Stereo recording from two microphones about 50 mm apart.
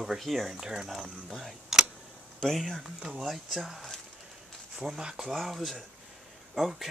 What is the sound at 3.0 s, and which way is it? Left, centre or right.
Speech, centre.